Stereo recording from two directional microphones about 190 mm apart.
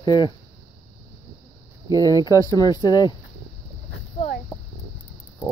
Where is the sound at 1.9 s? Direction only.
15° right (ahead or behind).